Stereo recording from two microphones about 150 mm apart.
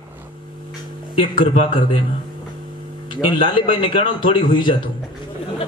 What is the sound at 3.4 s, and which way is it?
Speech, 35° left (ahead or behind).